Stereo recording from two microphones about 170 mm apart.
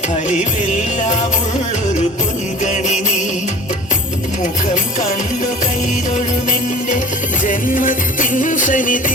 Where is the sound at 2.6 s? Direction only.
45° left (ahead or behind).